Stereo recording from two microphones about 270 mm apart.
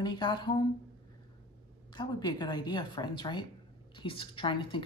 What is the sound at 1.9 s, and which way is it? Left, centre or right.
A woman's voice, centre.